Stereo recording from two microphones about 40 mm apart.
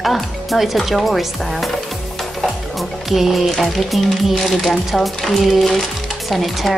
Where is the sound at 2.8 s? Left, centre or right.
Centre.